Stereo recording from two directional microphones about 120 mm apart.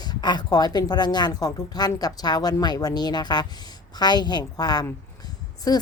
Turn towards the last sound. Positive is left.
turn(degrees=30)  # may be behind; listen again after turning